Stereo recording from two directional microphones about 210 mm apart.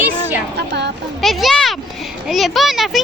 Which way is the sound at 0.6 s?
55° right (ahead or behind).